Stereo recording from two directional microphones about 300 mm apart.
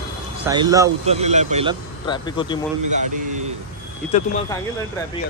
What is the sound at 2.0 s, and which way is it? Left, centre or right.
Speech, centre.